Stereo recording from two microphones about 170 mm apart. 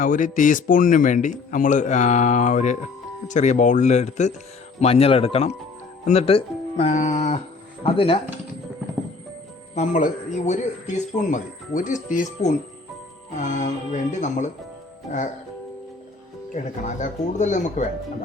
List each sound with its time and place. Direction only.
0.0 s speech: 50° left (ahead or behind); by 8.2 s 35° left (ahead or behind)
9.7 s speech: 45° left (ahead or behind)
16.6 s speech: 45° left (ahead or behind)